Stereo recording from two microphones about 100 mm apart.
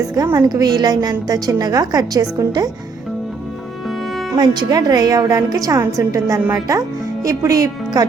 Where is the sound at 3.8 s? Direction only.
Centre (ahead or behind).